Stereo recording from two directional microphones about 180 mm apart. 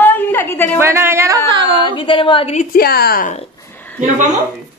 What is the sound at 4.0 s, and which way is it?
Speech, 40° right (ahead or behind).